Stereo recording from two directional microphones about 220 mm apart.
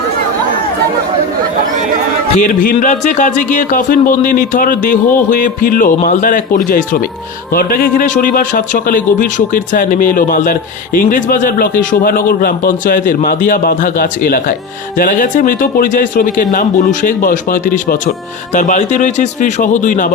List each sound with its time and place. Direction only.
2.4 s speech: 40° left (ahead or behind)